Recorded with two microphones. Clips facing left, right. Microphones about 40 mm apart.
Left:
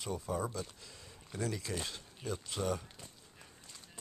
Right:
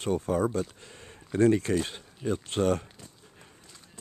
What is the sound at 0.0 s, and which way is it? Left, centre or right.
Speech, right.